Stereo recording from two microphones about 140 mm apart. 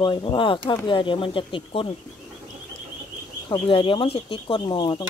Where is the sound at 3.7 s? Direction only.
40° left (ahead or behind).